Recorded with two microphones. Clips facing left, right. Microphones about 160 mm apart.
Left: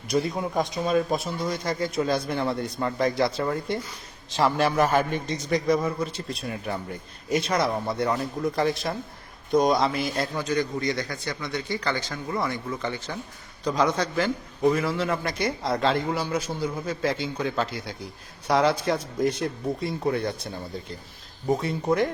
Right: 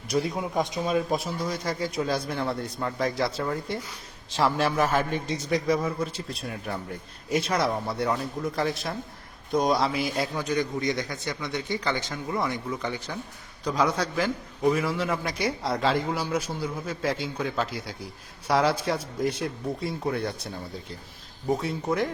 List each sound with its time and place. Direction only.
0.1 s a man's voice: 5° right (ahead or behind)
10.4 s a man's voice: 15° right (ahead or behind); by 20.5 s centre (ahead or behind)
21.6 s a man's voice: centre (ahead or behind)